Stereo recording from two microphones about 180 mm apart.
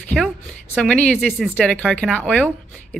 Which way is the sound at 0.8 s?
5° left (ahead or behind).